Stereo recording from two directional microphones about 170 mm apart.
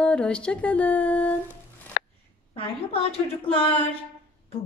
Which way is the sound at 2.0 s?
80° left.